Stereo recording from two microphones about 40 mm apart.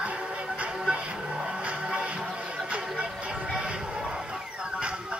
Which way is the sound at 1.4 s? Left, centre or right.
Centre.